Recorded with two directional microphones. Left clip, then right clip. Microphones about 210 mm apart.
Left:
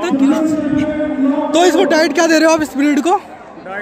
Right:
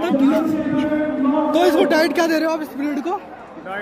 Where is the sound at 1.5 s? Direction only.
20° left (ahead or behind).